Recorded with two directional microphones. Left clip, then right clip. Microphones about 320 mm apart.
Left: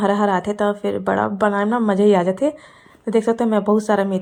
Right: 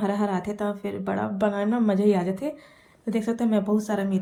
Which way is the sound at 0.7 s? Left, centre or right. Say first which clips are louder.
Left 9 dB; left.